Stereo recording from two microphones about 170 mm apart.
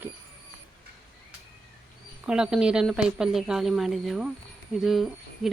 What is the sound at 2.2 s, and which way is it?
Speech, 5° right (ahead or behind).